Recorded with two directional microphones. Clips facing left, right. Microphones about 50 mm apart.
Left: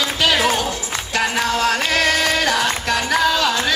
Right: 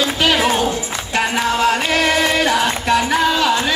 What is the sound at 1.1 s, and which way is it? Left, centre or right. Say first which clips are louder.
Music: right 2 dB; right.